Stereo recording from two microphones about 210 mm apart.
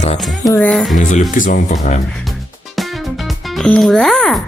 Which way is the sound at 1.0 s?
40° left (ahead or behind).